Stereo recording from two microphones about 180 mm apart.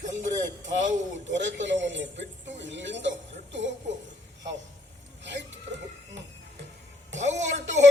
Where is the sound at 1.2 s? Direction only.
90° right.